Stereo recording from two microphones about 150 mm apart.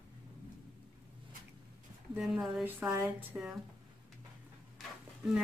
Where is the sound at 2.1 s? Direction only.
5° right (ahead or behind).